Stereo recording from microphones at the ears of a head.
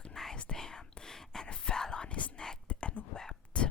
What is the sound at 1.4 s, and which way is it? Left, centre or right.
Whispering, left.